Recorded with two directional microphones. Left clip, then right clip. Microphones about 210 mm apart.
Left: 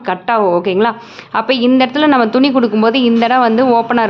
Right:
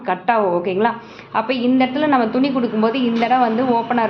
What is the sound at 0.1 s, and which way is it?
A woman's voice, 30° left (ahead or behind).